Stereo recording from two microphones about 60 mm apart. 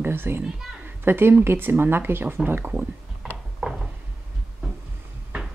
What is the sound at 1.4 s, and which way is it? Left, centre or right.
Speech, right.